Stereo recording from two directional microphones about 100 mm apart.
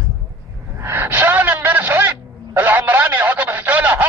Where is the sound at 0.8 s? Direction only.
20° right (ahead or behind).